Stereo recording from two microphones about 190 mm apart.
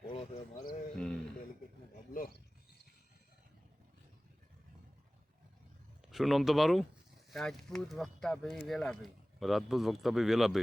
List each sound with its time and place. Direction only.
0.5 s a sound: 50° left (ahead or behind)
0.9 s mantra: 5° left (ahead or behind)
6.1 s speech: centre (ahead or behind)